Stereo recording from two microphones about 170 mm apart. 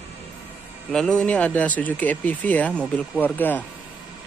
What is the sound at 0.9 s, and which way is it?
Speech, 5° left (ahead or behind).